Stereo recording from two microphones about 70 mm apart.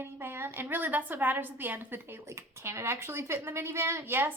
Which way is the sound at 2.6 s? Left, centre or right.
Right.